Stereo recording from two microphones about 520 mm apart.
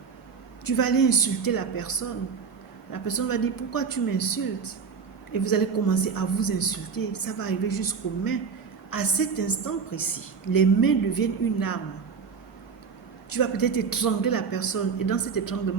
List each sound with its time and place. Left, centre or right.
0.6 s a woman's voice: left
10.5 s a woman's voice: left
13.3 s a woman's voice: left